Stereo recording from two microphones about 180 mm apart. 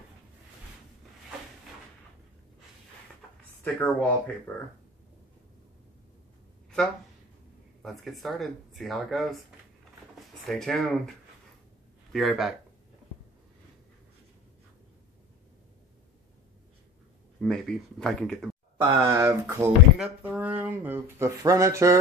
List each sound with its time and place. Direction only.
3.6 s speech: 5° left (ahead or behind)
7.8 s speech: centre (ahead or behind)
10.4 s speech: centre (ahead or behind)
17.4 s speech: 5° left (ahead or behind)
18.8 s speech: 15° right (ahead or behind)